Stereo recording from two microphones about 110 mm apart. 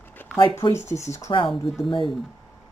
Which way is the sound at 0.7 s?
25° left (ahead or behind).